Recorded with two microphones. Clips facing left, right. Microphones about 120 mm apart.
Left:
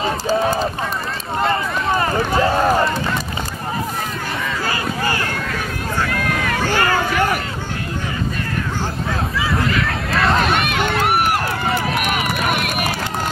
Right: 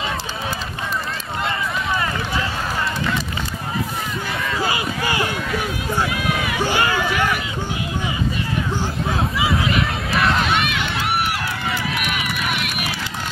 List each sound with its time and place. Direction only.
0.0 s run: 40° left (ahead or behind)
5.1 s run: 10° right (ahead or behind)
6.8 s a sound: 45° left (ahead or behind)
10.6 s run: 45° left (ahead or behind)